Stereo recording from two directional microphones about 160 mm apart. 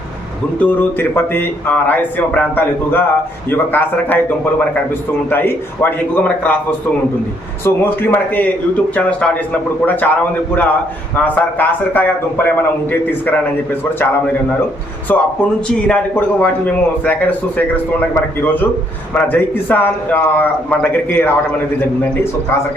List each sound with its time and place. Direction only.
0.6 s a man's voice: 10° left (ahead or behind)
7.6 s a man's voice: 15° left (ahead or behind)
11.2 s a man's voice: 10° left (ahead or behind)
15.1 s a man's voice: 10° left (ahead or behind)